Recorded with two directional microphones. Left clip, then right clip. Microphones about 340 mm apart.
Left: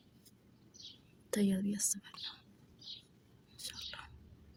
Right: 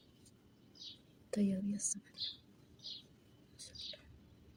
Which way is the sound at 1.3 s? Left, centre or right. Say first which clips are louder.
Left 3 dB; left.